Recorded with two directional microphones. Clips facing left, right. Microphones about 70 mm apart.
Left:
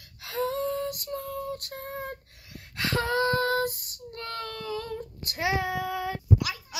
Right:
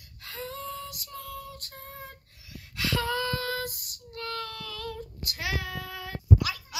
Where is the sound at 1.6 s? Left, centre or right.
Left; by 6.8 s centre.